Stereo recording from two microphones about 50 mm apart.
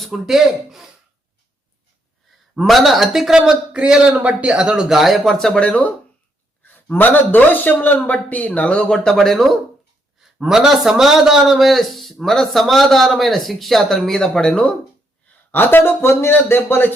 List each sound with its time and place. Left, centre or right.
0.0 s a man's voice: centre
2.6 s a man's voice: centre
4.1 s speech: right
4.9 s a man's voice: centre
5.5 s speech: left
6.6 s a sound: left
6.8 s a man's voice: left
8.9 s a man's voice: centre
10.3 s a man's voice: centre
15.5 s speech: left